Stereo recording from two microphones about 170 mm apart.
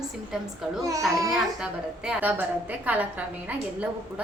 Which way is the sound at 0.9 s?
20° right (ahead or behind).